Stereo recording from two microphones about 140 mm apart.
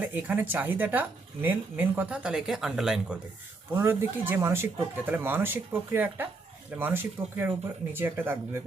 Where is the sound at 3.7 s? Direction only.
15° right (ahead or behind).